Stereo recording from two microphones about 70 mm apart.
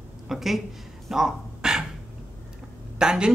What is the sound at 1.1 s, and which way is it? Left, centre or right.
Dog, centre.